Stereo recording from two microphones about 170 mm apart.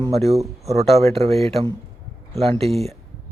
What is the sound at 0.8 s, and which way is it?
A man's voice, 40° right (ahead or behind).